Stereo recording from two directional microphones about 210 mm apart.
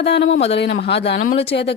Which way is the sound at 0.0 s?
55° left (ahead or behind).